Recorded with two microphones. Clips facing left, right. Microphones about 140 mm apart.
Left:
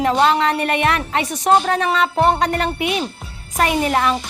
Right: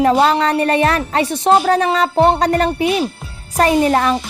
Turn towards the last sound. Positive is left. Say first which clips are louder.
# right 4 dB
turn(degrees=-35)  # may be behind; listen again after turning